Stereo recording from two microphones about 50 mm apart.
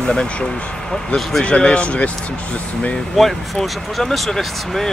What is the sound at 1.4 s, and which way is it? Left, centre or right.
Speech, left.